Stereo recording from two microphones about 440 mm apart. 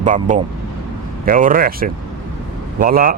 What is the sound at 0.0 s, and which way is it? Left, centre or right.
Speech, centre.